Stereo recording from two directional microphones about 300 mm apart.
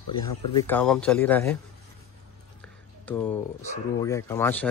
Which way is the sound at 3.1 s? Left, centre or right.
Centre.